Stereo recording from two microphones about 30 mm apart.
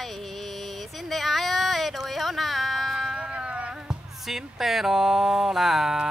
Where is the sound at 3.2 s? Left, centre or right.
Right.